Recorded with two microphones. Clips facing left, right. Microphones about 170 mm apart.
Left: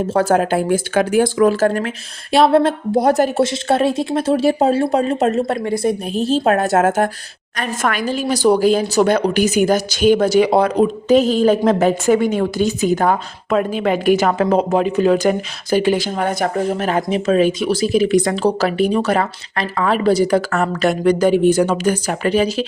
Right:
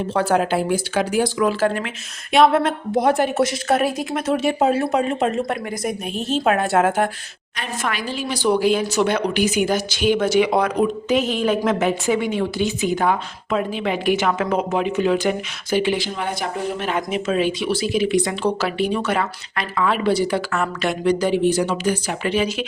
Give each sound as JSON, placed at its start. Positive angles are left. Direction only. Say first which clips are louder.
{"t": 0.1, "sound": "speech", "louder": "left 3 dB", "side_deg": 45}